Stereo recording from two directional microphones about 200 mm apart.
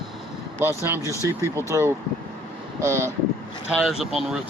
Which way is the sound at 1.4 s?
15° right (ahead or behind).